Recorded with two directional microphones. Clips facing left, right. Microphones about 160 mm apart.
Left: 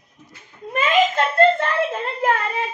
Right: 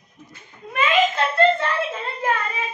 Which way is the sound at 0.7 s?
40° left (ahead or behind).